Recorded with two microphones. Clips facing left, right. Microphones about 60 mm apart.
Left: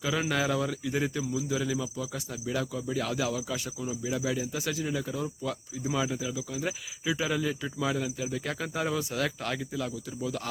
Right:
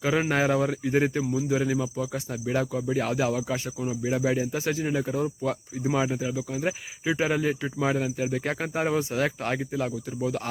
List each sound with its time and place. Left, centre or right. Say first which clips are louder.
0.0 s speech: right 5 dB; right